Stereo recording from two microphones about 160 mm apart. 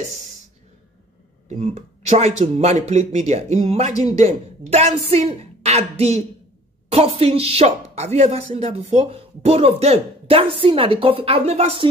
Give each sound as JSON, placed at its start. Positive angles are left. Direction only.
{"t": 1.6, "sound": "speech", "side_deg": -45}